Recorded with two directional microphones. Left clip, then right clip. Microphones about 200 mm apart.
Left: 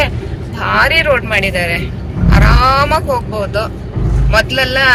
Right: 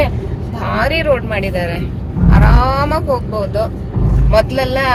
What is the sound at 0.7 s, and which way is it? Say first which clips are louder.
Speech: left 4 dB; 15° right (ahead or behind).